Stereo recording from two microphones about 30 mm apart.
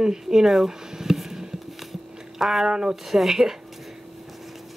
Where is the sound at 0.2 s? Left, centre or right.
Centre.